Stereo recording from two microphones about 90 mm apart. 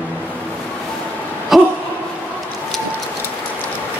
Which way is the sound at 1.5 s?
5° right (ahead or behind).